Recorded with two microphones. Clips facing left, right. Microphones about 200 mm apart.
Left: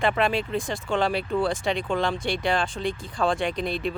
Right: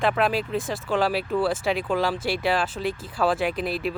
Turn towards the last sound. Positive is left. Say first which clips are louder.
# right 1 dB
turn(degrees=-5)  # may be behind; listen again after turning